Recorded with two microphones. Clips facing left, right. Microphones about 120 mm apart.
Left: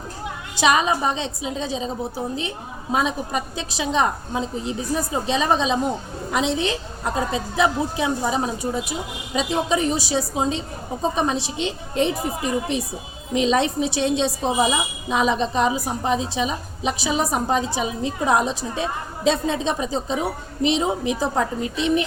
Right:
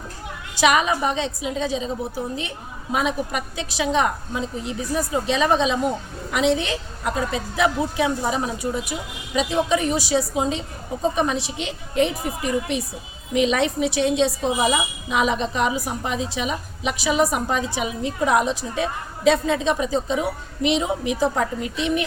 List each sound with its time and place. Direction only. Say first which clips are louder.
0.5 s a woman's voice: even; 25° left (ahead or behind)